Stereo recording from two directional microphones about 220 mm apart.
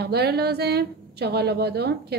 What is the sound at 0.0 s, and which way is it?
A woman's voice, 45° right (ahead or behind).